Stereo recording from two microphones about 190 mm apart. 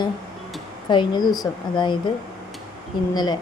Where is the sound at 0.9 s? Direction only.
25° left (ahead or behind).